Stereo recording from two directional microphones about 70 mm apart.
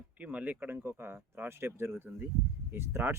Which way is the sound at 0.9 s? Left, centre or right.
Right.